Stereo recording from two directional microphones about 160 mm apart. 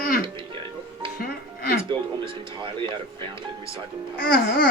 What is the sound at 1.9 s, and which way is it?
Speech, 30° right (ahead or behind).